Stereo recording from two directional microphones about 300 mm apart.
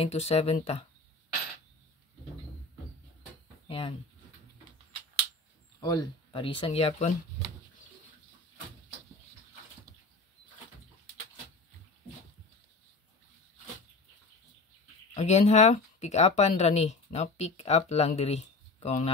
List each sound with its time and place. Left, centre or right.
0.0 s speech: centre
3.6 s a sound: centre
5.8 s speech: centre
15.1 s speech: left